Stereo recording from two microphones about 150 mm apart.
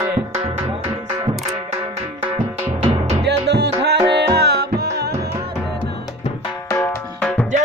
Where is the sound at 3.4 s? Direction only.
90° right.